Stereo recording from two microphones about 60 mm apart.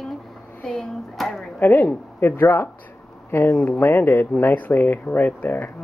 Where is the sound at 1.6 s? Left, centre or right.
Left.